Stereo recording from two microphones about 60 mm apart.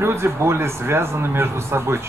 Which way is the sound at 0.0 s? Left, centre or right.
Right.